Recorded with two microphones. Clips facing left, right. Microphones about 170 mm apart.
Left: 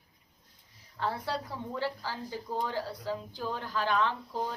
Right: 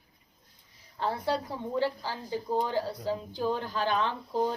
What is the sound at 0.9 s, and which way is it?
Speech, 20° right (ahead or behind).